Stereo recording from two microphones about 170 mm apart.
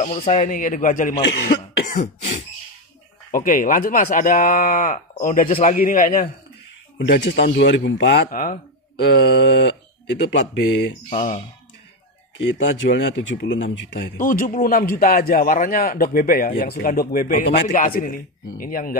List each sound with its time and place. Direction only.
0.0 s speech: 45° left (ahead or behind)
3.3 s a man's voice: 55° left (ahead or behind)
7.0 s speech: 90° left; by 8.5 s 55° left (ahead or behind)
9.2 s a sound: 75° left (ahead or behind); by 9.8 s 90° left
10.2 s speech: 90° left
11.1 s speech: 50° left (ahead or behind)
12.4 s speech: 90° left
14.1 s a man's voice: 50° left (ahead or behind)